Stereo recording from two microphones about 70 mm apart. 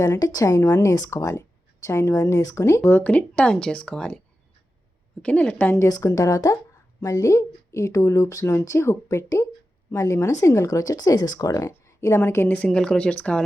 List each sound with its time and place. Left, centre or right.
0.2 s speech: left
3.0 s speech: left
5.2 s speech: centre
5.9 s speech: left
11.9 s a woman's voice: left
12.6 s speech: centre